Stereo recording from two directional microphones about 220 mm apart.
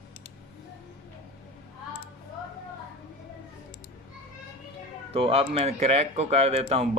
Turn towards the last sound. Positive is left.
turn(degrees=-25)  # may be behind; listen again after turning